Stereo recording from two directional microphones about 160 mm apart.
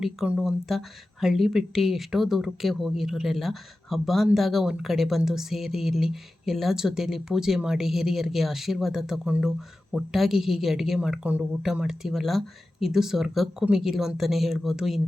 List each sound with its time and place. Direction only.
0.0 s speech: centre (ahead or behind)